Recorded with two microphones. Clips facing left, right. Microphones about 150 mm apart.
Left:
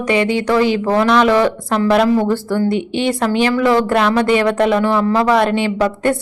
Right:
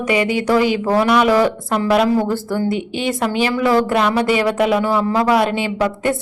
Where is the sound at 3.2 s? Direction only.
15° right (ahead or behind).